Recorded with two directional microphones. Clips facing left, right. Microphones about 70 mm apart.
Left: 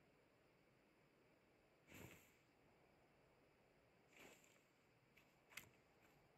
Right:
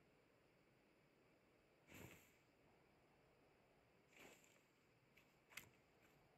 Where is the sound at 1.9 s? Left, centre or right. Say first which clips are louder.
Even; centre.